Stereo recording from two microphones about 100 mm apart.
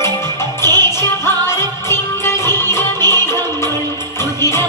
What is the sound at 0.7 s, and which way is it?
Music, 25° left (ahead or behind).